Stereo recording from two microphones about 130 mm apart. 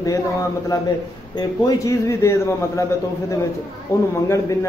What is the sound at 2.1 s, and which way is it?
Speech, 20° left (ahead or behind).